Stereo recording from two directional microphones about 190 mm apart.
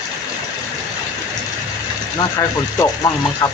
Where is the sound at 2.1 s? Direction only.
20° left (ahead or behind).